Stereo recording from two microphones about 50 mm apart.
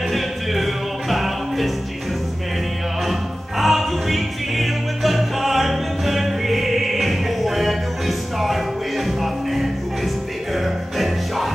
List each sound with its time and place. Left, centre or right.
0.1 s music: centre
3.1 s music: centre